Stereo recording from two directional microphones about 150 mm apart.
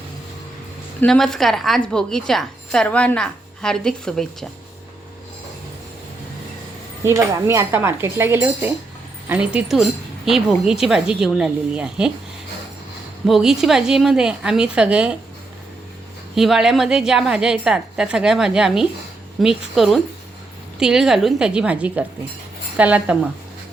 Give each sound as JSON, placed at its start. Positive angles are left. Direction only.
{"t": 1.0, "sound": "a woman's voice", "side_deg": 5}
{"t": 7.0, "sound": "a woman's voice", "side_deg": -20}
{"t": 13.2, "sound": "a woman's voice", "side_deg": 0}
{"t": 16.3, "sound": "a woman's voice", "side_deg": 0}